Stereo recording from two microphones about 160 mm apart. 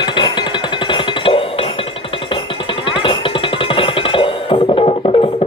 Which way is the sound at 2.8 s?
30° left (ahead or behind).